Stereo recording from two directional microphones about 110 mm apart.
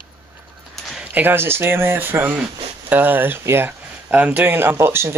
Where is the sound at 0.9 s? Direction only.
15° right (ahead or behind).